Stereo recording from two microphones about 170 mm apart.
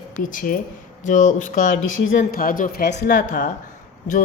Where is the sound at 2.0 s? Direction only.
75° left (ahead or behind); by 2.8 s 55° left (ahead or behind).